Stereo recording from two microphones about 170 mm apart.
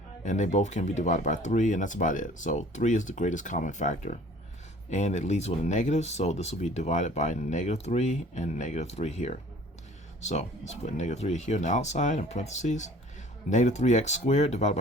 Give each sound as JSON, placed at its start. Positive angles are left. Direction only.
{"t": 0.3, "sound": "speech", "side_deg": 45}